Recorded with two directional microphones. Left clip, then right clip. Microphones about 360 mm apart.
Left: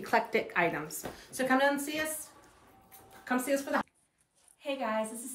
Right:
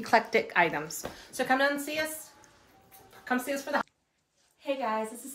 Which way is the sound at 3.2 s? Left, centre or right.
Centre.